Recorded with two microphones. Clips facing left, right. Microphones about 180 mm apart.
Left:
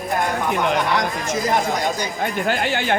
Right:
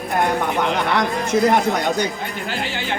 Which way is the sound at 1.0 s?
60° right (ahead or behind).